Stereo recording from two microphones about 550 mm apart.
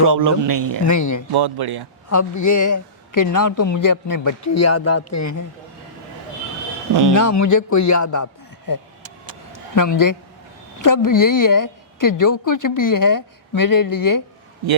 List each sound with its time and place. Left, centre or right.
0.0 s speech: right
0.9 s a woman's voice: left
1.3 s speech: right
2.0 s a woman's voice: left
7.1 s a woman's voice: left